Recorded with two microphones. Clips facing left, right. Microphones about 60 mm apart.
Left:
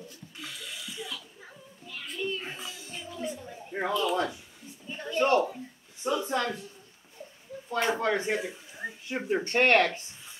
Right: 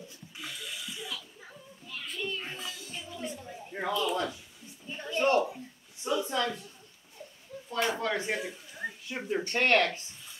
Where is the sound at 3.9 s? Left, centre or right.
Left.